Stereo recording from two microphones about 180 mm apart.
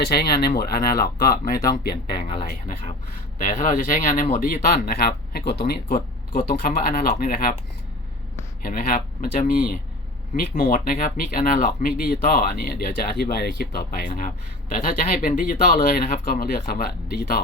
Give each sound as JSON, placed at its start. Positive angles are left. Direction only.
{"t": 0.0, "sound": "speech", "side_deg": 60}
{"t": 2.1, "sound": "a sound", "side_deg": 30}
{"t": 2.5, "sound": "speech", "side_deg": 50}
{"t": 8.6, "sound": "speech", "side_deg": 50}
{"t": 14.8, "sound": "speech", "side_deg": 50}